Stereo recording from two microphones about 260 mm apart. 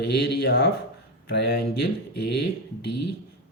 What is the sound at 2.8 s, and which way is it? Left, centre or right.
Speech, left.